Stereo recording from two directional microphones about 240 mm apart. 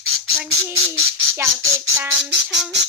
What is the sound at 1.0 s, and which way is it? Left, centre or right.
Bird, right.